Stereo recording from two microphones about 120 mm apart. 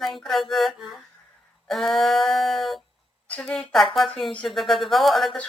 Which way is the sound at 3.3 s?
10° left (ahead or behind).